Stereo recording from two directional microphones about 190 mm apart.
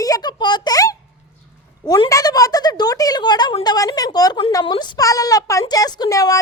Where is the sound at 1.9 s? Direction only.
20° left (ahead or behind).